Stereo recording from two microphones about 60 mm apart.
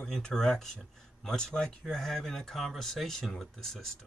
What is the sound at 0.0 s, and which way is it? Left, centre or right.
Speech, centre.